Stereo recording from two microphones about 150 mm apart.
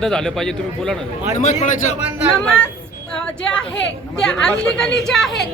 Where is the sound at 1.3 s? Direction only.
55° left (ahead or behind).